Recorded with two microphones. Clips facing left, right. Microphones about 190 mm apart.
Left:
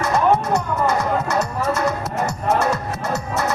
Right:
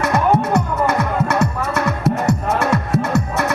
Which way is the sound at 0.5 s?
60° right (ahead or behind).